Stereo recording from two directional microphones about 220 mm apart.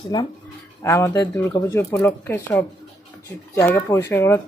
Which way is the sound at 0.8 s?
15° left (ahead or behind).